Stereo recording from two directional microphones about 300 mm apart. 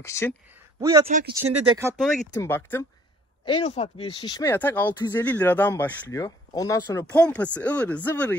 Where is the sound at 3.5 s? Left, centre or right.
Centre.